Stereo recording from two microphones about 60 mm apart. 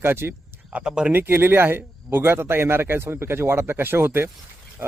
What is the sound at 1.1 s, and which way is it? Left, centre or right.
A man's voice, right.